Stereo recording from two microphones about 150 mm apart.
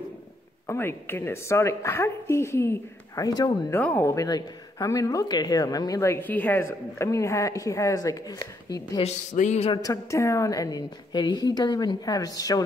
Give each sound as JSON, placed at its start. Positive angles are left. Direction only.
{"t": 0.7, "sound": "a woman's voice", "side_deg": 15}
{"t": 3.7, "sound": "a woman's voice", "side_deg": 15}
{"t": 9.0, "sound": "speech", "side_deg": 50}
{"t": 9.8, "sound": "a woman's voice", "side_deg": 20}